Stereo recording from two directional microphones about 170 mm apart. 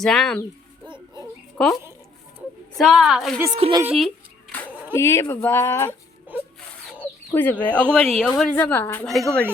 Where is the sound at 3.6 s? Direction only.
35° right (ahead or behind).